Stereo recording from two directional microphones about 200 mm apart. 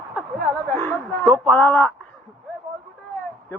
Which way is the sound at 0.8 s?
10° left (ahead or behind).